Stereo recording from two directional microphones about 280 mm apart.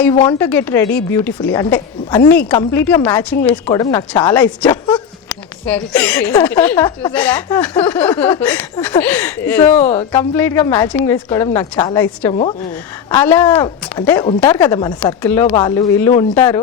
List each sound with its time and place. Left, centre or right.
0.0 s a woman's voice: centre
9.7 s speech: left
10.1 s a woman's voice: centre